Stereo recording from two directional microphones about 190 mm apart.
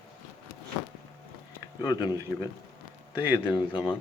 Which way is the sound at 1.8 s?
20° left (ahead or behind).